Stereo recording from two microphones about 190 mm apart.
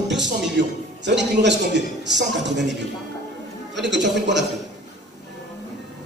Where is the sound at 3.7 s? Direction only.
65° right (ahead or behind).